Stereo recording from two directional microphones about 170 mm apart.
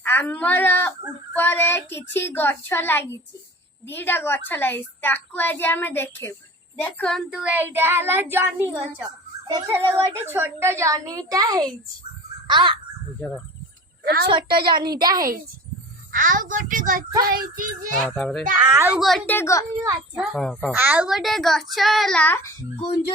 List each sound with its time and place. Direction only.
0.0 s a woman's voice: 10° left (ahead or behind); by 11.7 s 20° right (ahead or behind)
12.5 s crow: 25° right (ahead or behind)
13.1 s speech: 10° left (ahead or behind)
14.0 s a woman's voice: 65° right (ahead or behind)
14.3 s a woman's voice: 30° right (ahead or behind)
16.1 s a woman's voice: 50° right (ahead or behind)
17.2 s child singing: 55° right (ahead or behind)
17.9 s a child's voice: 5° left (ahead or behind)
18.6 s speech: 15° right (ahead or behind)
18.9 s speech: centre (ahead or behind)
20.1 s a child's voice: centre (ahead or behind)
20.7 s a child's voice: 10° right (ahead or behind); by 22.5 s 10° left (ahead or behind)